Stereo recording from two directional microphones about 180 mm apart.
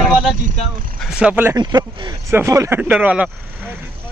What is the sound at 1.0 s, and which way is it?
Speech, 5° right (ahead or behind).